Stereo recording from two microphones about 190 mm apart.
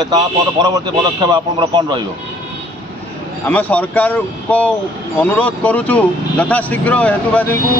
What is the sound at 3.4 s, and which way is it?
Speech, 10° left (ahead or behind).